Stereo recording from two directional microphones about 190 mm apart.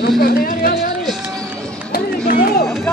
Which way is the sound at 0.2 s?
50° left (ahead or behind).